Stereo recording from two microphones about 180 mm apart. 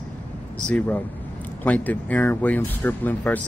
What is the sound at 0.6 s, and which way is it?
Speech, 5° left (ahead or behind).